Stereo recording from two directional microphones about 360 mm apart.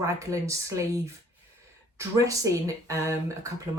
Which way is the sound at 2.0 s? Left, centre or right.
Centre.